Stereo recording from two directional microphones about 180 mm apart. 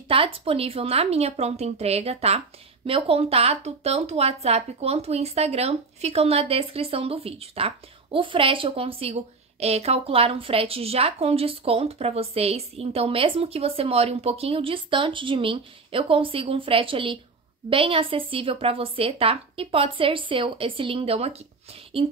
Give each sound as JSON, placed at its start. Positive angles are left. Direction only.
{"t": 0.1, "sound": "a woman's voice", "side_deg": -30}